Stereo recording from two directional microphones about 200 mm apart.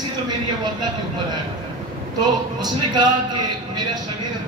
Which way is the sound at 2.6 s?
20° right (ahead or behind).